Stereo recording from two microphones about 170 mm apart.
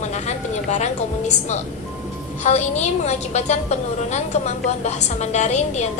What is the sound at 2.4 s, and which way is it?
A woman's voice, 40° left (ahead or behind).